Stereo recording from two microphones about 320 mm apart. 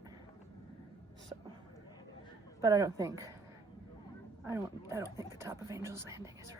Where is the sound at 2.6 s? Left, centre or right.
Centre.